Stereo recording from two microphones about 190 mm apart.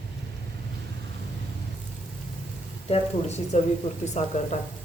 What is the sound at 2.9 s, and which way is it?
Speech, 35° left (ahead or behind).